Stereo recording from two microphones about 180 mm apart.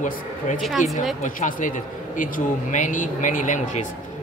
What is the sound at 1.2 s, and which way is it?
Speech, 45° left (ahead or behind).